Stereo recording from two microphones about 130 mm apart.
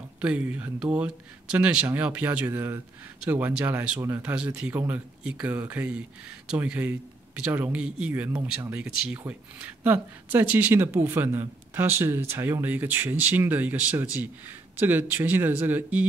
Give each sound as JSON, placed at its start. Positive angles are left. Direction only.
{"t": 0.2, "sound": "speech", "side_deg": -10}